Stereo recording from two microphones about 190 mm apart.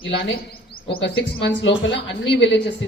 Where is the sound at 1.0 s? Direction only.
65° left (ahead or behind).